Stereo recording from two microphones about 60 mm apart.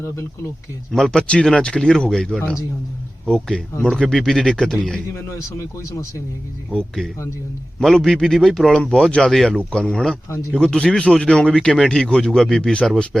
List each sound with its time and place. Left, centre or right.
0.9 s speech: centre
5.1 s speech: left
6.7 s speech: centre
9.6 s speech: centre